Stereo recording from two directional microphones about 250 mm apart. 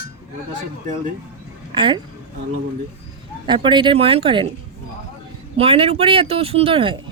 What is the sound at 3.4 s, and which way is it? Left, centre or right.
Speech, centre.